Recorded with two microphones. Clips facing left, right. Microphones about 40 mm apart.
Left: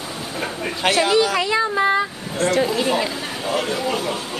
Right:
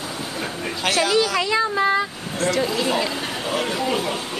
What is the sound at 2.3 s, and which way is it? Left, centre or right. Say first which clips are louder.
Speech: left 3 dB; left.